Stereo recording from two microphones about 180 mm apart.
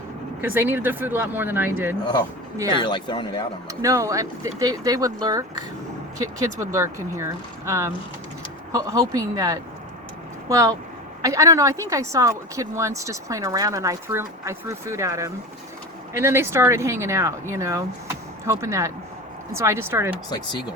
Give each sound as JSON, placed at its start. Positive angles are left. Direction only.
{"t": 0.4, "sound": "speech", "side_deg": -10}
{"t": 2.8, "sound": "speech", "side_deg": 25}
{"t": 3.7, "sound": "speech", "side_deg": -15}
{"t": 20.3, "sound": "speech", "side_deg": 25}